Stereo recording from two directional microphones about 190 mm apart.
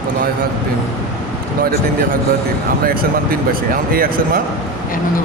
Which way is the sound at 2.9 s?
50° right (ahead or behind).